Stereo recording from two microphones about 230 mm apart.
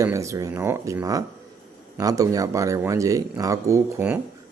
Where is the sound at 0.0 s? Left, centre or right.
Centre.